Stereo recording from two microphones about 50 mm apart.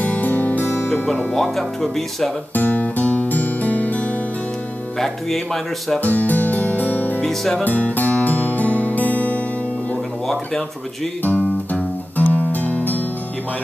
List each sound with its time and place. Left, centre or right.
0.0 s music: left
0.7 s music: left
1.3 s speech: centre
2.5 s music: left
4.9 s speech: centre
5.9 s music: left
7.2 s speech: centre
7.6 s music: left
10.2 s speech: centre
11.2 s music: left